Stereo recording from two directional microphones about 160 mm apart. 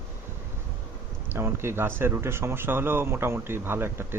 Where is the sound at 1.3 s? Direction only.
15° right (ahead or behind).